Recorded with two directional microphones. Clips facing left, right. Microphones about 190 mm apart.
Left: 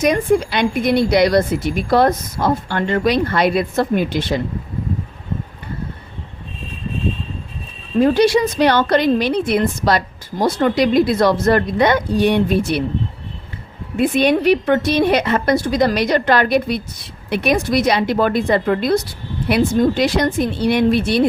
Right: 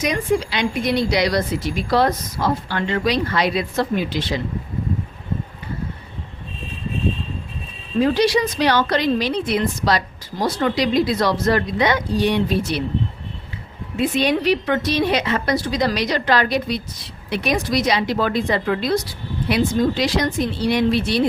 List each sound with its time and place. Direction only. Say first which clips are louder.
0.0 s speech: left 5 dB; 50° left (ahead or behind)
7.9 s speech: left 4 dB; 50° left (ahead or behind)
14.0 s speech: left 4 dB; 55° left (ahead or behind)